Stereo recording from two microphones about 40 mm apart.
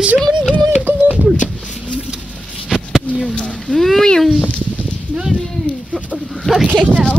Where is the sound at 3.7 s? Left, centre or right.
Centre.